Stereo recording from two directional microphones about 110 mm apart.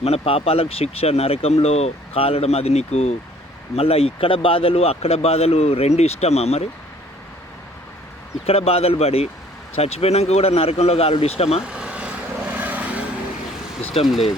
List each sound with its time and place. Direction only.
0.0 s speech: 65° left (ahead or behind); by 3.2 s 85° left
3.8 s speech: 60° left (ahead or behind)
8.4 s speech: 65° left (ahead or behind)
11.6 s vehicle: 10° right (ahead or behind)
13.8 s speech: 60° left (ahead or behind)